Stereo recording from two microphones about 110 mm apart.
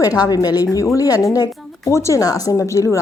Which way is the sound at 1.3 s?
35° left (ahead or behind).